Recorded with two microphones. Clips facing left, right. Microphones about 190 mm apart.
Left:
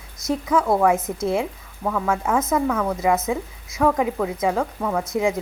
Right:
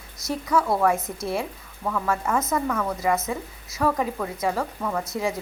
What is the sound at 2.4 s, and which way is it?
Speech, 5° left (ahead or behind).